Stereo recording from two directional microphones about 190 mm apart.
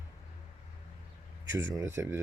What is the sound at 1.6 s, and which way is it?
Speech, 15° right (ahead or behind).